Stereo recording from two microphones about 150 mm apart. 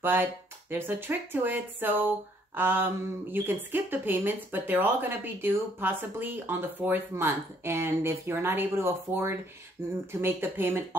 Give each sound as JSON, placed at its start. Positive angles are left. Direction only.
{"t": 0.0, "sound": "speech", "side_deg": -15}